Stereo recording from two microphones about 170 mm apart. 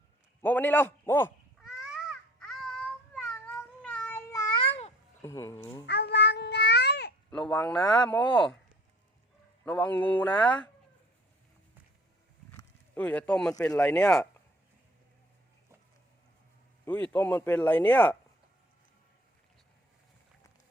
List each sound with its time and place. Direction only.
0.4 s a man's voice: 10° left (ahead or behind)
1.5 s babbling: 5° right (ahead or behind)
4.3 s babbling: 20° left (ahead or behind)
5.2 s speech: 20° left (ahead or behind)
5.8 s babbling: 75° left (ahead or behind)
7.6 s speech: 10° left (ahead or behind)
8.2 s speech: 30° left (ahead or behind)
9.6 s speech: 10° left (ahead or behind)
12.9 s speech: 10° left (ahead or behind)
16.8 s speech: 10° left (ahead or behind)